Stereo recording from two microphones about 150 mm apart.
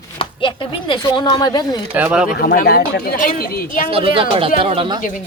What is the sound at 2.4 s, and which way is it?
Speech, 90° left.